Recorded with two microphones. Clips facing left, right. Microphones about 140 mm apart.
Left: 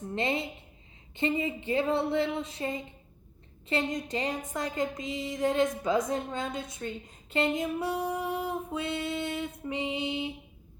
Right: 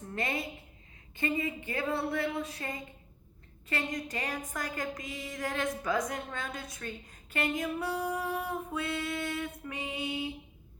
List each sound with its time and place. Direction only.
0.1 s a woman's voice: 25° left (ahead or behind)